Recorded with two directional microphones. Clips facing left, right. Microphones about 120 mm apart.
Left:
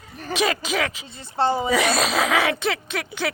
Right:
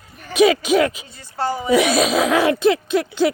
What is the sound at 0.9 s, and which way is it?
Speech, 25° left (ahead or behind).